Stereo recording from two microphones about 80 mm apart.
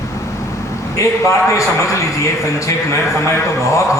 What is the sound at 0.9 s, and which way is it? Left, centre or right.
Speech, left.